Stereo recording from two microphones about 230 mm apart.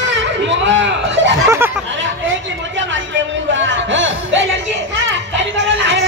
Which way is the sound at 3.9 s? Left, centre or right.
Right.